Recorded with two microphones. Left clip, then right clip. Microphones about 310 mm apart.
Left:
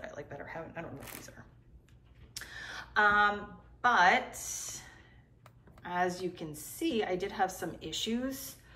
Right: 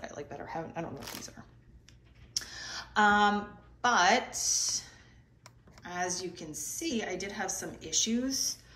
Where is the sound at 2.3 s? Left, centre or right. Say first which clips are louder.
Right 4 dB; centre.